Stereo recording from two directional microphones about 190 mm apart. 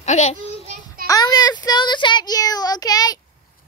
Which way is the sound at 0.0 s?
35° left (ahead or behind).